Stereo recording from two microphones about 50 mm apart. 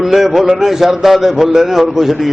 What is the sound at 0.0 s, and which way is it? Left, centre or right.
A man's voice, centre.